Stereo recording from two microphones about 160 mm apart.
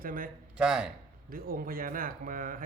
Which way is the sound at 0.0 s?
60° right (ahead or behind).